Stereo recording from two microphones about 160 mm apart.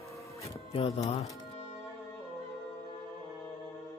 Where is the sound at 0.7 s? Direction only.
40° left (ahead or behind).